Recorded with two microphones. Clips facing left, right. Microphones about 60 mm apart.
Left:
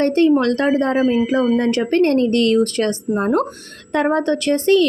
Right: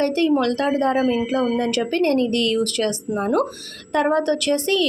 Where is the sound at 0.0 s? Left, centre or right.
Left.